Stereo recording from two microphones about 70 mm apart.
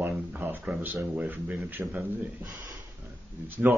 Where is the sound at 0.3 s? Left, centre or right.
Right.